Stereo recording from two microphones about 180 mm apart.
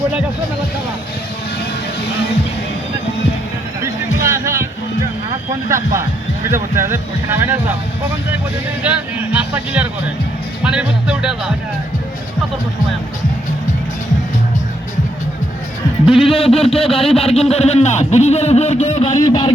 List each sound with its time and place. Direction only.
4.3 s music: 15° right (ahead or behind)
5.6 s speech: 15° right (ahead or behind)
8.8 s speech: 5° right (ahead or behind)
16.1 s speech: 30° left (ahead or behind)
19.1 s a sound: 20° left (ahead or behind)